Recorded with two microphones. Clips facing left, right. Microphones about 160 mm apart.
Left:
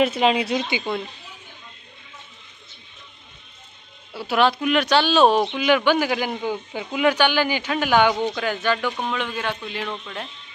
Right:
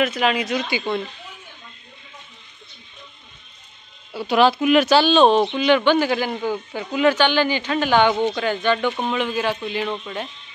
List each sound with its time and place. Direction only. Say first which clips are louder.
0.0 s speech: left 1 dB; 25° left (ahead or behind)
4.1 s speech: right 3 dB; centre (ahead or behind)